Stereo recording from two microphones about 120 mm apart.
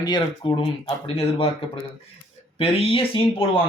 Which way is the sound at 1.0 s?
50° left (ahead or behind).